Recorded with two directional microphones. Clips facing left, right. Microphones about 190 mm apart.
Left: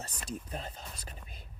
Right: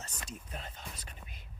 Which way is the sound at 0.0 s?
35° left (ahead or behind).